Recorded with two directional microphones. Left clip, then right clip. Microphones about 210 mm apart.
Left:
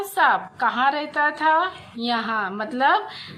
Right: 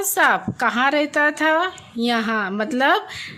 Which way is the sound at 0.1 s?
50° right (ahead or behind).